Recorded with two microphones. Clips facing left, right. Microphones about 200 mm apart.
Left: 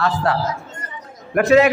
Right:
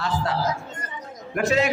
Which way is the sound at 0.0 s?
65° left (ahead or behind).